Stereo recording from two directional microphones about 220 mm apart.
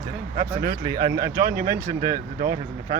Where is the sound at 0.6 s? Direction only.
45° right (ahead or behind).